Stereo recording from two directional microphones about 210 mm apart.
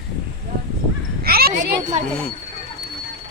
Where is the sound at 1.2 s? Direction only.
45° right (ahead or behind).